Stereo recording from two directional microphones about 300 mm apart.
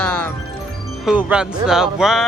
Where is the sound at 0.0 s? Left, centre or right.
Centre.